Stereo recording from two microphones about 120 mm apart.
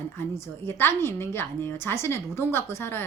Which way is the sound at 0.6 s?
20° left (ahead or behind).